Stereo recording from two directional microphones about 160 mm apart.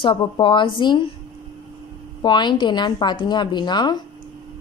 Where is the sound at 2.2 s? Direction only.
30° left (ahead or behind).